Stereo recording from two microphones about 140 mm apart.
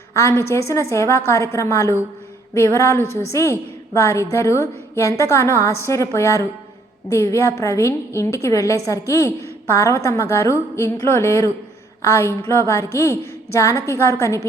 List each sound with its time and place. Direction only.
0.1 s a woman's voice: 20° left (ahead or behind)